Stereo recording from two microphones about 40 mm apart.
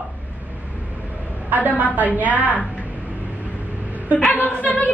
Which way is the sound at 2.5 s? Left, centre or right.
Left.